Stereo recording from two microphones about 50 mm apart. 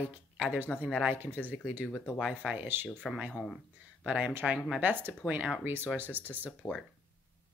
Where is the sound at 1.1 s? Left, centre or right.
Right.